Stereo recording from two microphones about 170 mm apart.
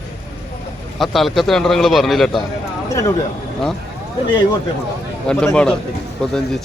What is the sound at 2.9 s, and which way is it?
Speech, 20° left (ahead or behind).